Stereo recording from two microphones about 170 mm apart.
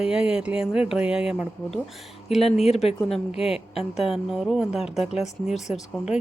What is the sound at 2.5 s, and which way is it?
Speech, 40° left (ahead or behind).